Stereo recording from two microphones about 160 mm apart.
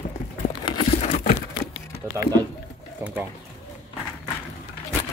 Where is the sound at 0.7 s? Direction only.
30° left (ahead or behind).